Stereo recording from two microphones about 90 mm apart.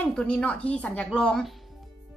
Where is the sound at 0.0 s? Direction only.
15° left (ahead or behind).